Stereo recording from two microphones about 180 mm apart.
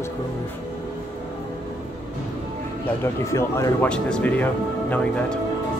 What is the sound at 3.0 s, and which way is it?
Speech, 15° left (ahead or behind).